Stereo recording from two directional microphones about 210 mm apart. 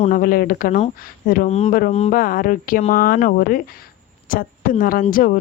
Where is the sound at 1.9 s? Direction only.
30° left (ahead or behind).